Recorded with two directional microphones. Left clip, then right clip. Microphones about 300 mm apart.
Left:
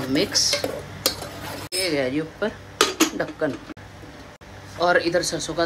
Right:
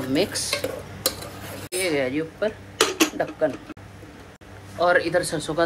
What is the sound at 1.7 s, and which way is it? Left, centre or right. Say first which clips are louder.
Speech: even; centre.